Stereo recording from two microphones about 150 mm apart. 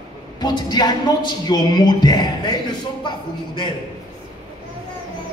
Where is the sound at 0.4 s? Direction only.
30° left (ahead or behind).